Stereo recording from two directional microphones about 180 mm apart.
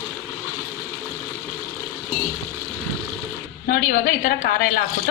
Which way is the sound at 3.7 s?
55° left (ahead or behind).